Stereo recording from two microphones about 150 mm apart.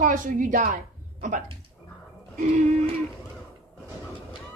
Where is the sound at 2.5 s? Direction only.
55° right (ahead or behind).